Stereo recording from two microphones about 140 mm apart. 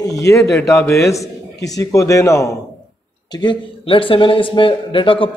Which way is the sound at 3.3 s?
30° left (ahead or behind).